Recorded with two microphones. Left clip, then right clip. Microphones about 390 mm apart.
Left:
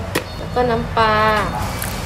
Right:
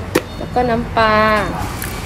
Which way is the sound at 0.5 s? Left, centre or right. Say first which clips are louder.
Right 1 dB; centre.